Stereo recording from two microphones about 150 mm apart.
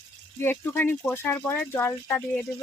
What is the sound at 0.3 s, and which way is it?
A woman's voice, 15° left (ahead or behind).